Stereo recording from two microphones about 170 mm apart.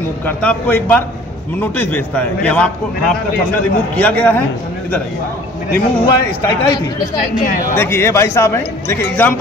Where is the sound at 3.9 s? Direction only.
10° left (ahead or behind).